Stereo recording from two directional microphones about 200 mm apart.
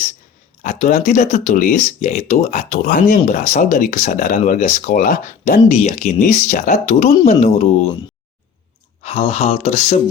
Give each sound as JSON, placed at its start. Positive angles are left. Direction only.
{"t": 0.6, "sound": "speech", "side_deg": 35}
{"t": 9.0, "sound": "speech", "side_deg": 30}